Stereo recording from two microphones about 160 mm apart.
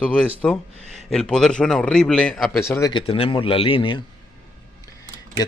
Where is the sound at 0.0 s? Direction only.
5° left (ahead or behind).